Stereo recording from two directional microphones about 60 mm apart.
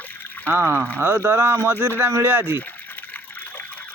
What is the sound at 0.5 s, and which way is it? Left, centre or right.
Speech, right.